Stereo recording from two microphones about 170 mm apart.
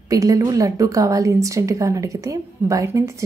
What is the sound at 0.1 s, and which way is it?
A woman's voice, 20° right (ahead or behind).